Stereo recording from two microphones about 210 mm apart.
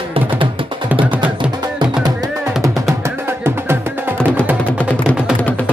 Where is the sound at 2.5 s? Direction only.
Centre (ahead or behind).